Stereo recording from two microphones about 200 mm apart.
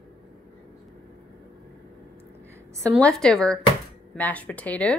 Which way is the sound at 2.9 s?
Centre (ahead or behind).